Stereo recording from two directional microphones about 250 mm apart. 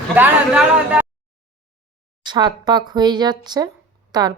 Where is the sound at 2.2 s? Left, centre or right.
Centre.